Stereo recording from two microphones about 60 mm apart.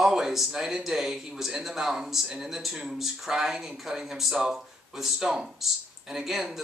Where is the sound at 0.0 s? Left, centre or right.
Centre.